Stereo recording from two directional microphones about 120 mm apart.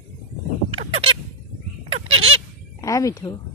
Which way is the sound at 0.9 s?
50° right (ahead or behind).